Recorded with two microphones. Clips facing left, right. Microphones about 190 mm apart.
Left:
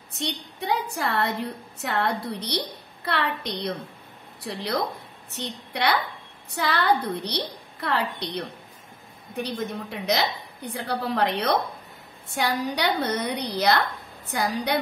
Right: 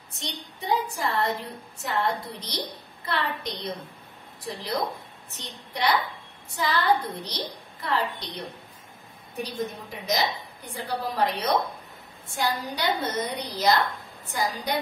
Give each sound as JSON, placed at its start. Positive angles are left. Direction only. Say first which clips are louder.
{"t": 0.2, "sound": "a woman's voice", "louder": "left 5 dB", "side_deg": 65}
{"t": 9.4, "sound": "a woman's voice", "louder": "left 2 dB", "side_deg": 65}